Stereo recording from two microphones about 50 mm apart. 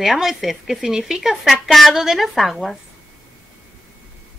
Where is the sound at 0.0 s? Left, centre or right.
Centre.